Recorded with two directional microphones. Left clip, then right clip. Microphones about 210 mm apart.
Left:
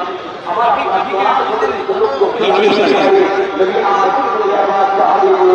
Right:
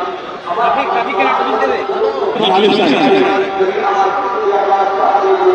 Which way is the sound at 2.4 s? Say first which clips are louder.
Right 1 dB; 50° right (ahead or behind).